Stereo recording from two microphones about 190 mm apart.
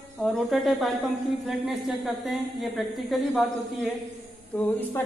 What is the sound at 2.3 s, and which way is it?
Speech, centre (ahead or behind).